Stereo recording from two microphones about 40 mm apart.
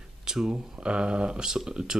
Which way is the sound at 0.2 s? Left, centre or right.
Centre.